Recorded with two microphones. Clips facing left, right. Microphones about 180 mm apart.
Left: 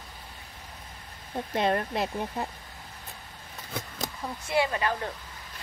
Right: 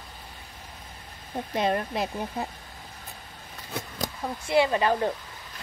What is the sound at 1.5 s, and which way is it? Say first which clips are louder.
Speech: even; 10° right (ahead or behind).